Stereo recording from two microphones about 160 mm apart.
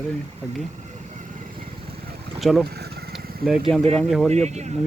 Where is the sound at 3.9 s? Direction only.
Centre (ahead or behind).